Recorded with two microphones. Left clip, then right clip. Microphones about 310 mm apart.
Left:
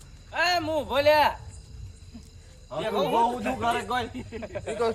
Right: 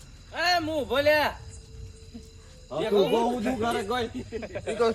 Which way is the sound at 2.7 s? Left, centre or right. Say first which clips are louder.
Right 2 dB; centre.